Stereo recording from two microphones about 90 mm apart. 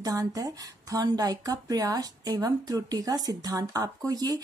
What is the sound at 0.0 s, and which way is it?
Speech, 45° right (ahead or behind).